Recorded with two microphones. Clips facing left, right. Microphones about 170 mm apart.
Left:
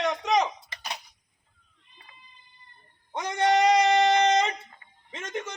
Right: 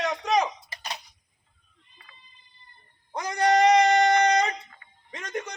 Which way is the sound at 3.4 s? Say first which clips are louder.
Right 2 dB; 25° left (ahead or behind).